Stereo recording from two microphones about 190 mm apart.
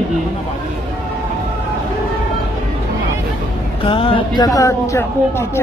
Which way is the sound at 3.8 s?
25° left (ahead or behind).